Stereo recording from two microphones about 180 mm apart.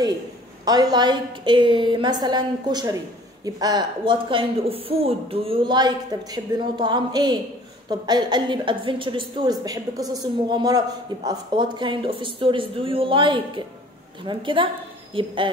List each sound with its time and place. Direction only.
0.7 s speech: 20° right (ahead or behind)